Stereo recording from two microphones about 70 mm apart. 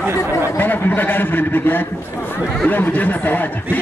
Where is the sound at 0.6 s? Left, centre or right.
Left.